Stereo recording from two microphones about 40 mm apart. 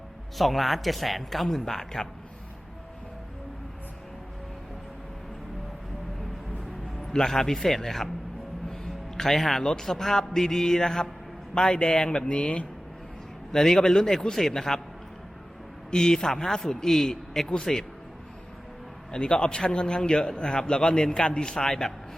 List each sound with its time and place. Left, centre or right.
0.3 s speech: centre
7.1 s a man's voice: centre
13.5 s a man's voice: centre
15.9 s a man's voice: centre
19.1 s a man's voice: left